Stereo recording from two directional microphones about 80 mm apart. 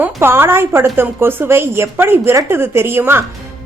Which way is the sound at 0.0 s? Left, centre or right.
Right.